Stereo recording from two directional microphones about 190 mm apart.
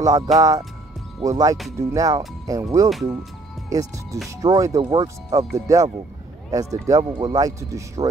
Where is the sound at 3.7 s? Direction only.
20° right (ahead or behind).